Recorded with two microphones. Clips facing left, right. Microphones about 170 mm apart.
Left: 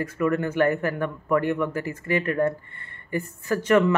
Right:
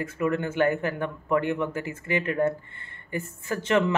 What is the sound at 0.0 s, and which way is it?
Speech, 20° right (ahead or behind).